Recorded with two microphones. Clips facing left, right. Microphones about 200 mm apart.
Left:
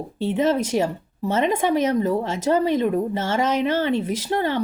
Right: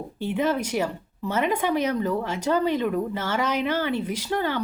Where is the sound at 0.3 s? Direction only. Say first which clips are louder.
Left 4 dB; 25° left (ahead or behind).